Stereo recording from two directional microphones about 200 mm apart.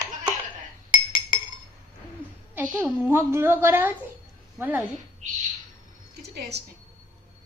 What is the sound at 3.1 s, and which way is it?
A woman's voice, 15° right (ahead or behind).